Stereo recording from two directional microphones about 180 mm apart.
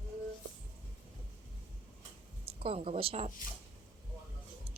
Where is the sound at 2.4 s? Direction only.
30° right (ahead or behind).